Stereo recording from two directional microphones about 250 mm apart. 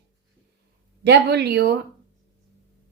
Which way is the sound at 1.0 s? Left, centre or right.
Right.